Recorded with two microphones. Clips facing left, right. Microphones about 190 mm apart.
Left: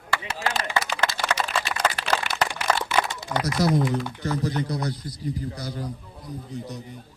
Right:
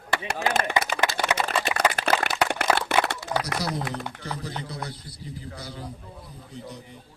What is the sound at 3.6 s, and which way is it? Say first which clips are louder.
Speech: left 8 dB; 45° left (ahead or behind).